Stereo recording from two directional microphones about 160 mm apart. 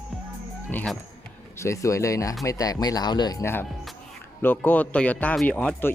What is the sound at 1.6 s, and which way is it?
Speech, 20° left (ahead or behind).